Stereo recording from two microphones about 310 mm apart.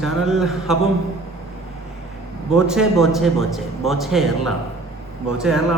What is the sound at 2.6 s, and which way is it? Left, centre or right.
A man's voice, centre.